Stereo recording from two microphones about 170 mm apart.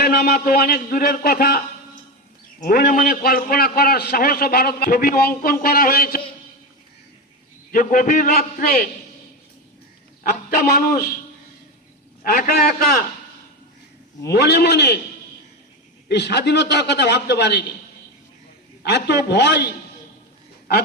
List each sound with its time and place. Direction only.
0.0 s a man's voice: 65° left (ahead or behind)
7.7 s a man's voice: 55° left (ahead or behind)
10.7 s a man's voice: 55° left (ahead or behind)
12.2 s a man's voice: 55° left (ahead or behind)
14.3 s a man's voice: 75° left (ahead or behind)
16.0 s a man's voice: 85° left
18.8 s a man's voice: 75° left (ahead or behind)